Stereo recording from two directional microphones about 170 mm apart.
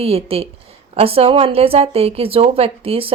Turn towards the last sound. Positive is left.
turn(degrees=-35)  # may be behind; listen again after turning